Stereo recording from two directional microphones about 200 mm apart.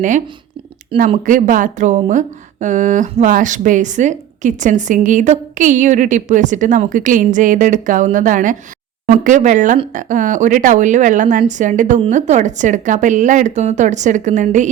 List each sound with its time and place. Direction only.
0.9 s speech: 40° right (ahead or behind)